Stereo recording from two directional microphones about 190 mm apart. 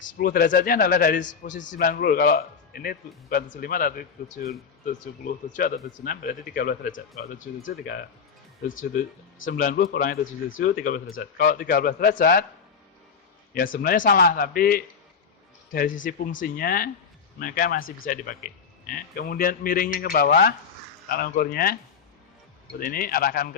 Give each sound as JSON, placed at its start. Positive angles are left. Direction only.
{"t": 0.0, "sound": "a man's voice", "side_deg": 45}
{"t": 13.8, "sound": "a man's voice", "side_deg": 50}
{"t": 22.8, "sound": "a man's voice", "side_deg": 50}